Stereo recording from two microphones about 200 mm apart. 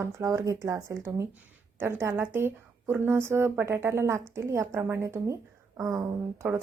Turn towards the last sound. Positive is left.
turn(degrees=-15)  # may be behind; listen again after turning